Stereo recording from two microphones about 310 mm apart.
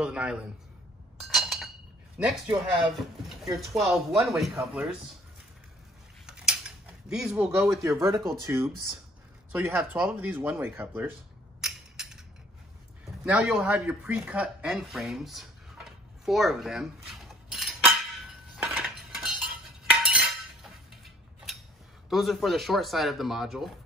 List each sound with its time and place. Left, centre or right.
0.0 s speech: centre
1.3 s chink: centre
2.1 s speech: centre
6.2 s a sound: centre
7.1 s speech: centre
11.6 s a sound: centre
13.2 s speech: centre
18.6 s cutlery: centre
19.4 s chink: centre
22.1 s speech: centre